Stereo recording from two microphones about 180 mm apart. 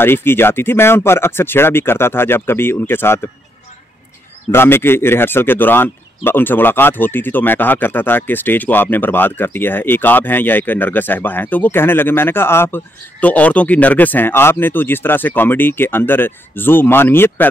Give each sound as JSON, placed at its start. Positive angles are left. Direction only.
{"t": 0.0, "sound": "speech", "side_deg": 10}
{"t": 4.5, "sound": "speech", "side_deg": 15}